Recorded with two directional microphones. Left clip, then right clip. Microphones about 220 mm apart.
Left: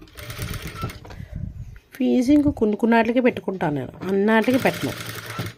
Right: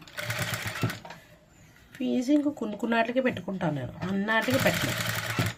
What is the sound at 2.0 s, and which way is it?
Speech, 40° left (ahead or behind).